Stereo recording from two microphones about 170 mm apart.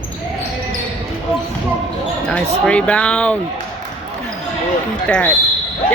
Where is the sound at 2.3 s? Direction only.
5° left (ahead or behind).